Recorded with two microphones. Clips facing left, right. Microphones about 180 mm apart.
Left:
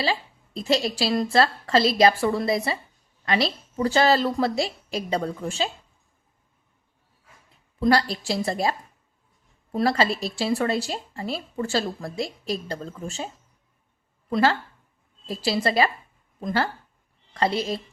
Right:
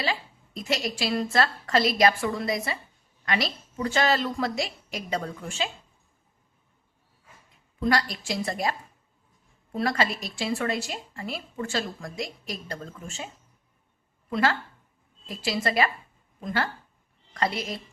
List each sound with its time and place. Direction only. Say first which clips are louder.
0.0 s a woman's voice: left 4 dB; 30° left (ahead or behind)
7.8 s a woman's voice: left 5 dB; 30° left (ahead or behind)
9.7 s a woman's voice: left 4 dB; 35° left (ahead or behind)